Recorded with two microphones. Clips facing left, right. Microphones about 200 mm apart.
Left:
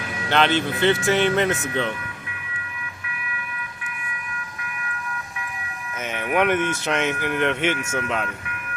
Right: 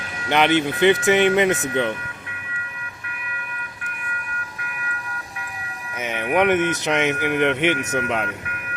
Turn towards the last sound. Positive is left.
turn(degrees=-15)  # may be behind; listen again after turning